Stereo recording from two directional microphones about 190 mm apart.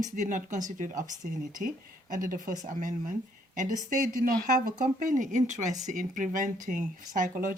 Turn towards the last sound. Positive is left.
turn(degrees=-45)  # may be behind; listen again after turning